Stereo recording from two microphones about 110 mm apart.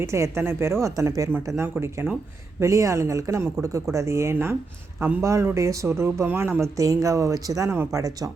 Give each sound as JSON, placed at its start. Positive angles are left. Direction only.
{"t": 0.0, "sound": "a woman's voice", "side_deg": -25}